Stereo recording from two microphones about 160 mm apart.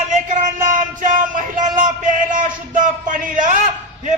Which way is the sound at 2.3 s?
55° right (ahead or behind).